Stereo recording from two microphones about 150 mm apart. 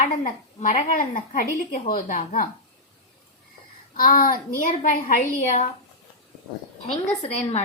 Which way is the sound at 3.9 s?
70° left (ahead or behind).